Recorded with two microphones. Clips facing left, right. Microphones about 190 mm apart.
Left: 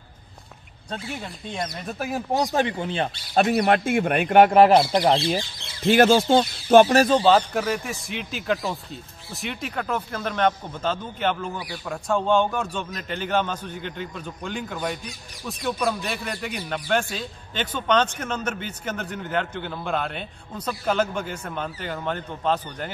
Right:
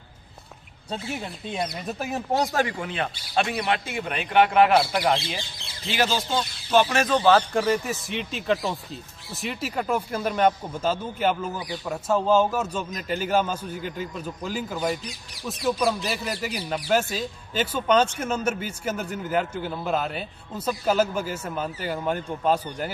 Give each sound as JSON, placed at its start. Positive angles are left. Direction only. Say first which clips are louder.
{"t": 1.1, "sound": "speech", "louder": "right 1 dB", "side_deg": -5}
{"t": 2.3, "sound": "speech", "louder": "left 1 dB", "side_deg": 15}
{"t": 3.4, "sound": "speech", "louder": "left 7 dB", "side_deg": 45}
{"t": 5.9, "sound": "speech", "louder": "left 9 dB", "side_deg": 50}
{"t": 7.0, "sound": "speech", "louder": "left 4 dB", "side_deg": 30}
{"t": 7.5, "sound": "speech", "louder": "right 2 dB", "side_deg": 0}